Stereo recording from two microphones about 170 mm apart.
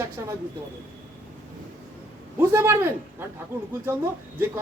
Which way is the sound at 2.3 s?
15° right (ahead or behind).